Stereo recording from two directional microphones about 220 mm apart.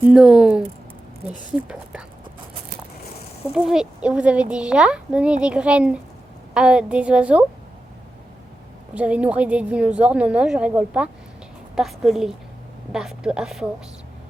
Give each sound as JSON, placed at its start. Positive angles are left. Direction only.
{"t": 0.1, "sound": "speech", "side_deg": 0}
{"t": 3.5, "sound": "speech", "side_deg": -5}
{"t": 9.0, "sound": "speech", "side_deg": -5}